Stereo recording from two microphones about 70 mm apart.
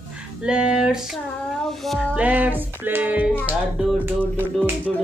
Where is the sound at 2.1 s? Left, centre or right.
Right.